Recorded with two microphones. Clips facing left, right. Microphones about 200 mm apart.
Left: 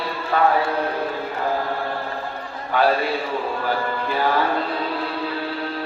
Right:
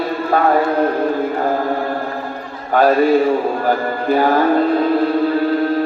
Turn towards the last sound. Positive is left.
turn(degrees=-45)  # may be behind; listen again after turning